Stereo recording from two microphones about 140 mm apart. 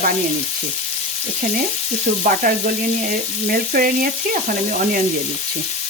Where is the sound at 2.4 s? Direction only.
80° right.